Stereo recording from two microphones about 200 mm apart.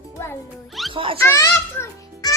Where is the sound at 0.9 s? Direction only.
25° right (ahead or behind).